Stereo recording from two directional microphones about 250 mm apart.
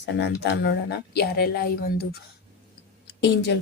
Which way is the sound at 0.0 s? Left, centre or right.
Left.